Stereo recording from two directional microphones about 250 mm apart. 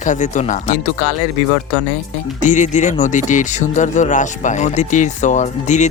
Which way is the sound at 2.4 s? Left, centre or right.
Left.